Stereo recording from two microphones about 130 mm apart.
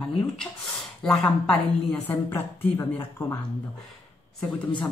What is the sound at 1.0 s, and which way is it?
Speech, 5° left (ahead or behind).